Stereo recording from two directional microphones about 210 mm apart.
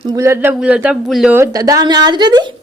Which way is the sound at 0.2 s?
10° right (ahead or behind).